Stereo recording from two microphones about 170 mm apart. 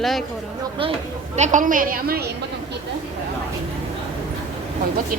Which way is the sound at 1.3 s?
45° right (ahead or behind).